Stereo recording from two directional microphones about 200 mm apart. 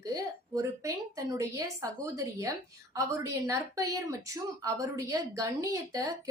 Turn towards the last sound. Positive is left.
turn(degrees=-15)  # may be behind; listen again after turning